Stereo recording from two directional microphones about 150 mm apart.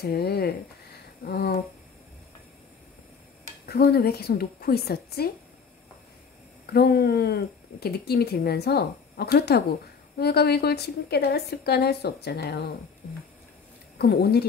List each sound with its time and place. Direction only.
0.0 s speech: 90° left
3.6 s speech: 90° left
6.6 s speech: 90° left
13.9 s speech: 90° left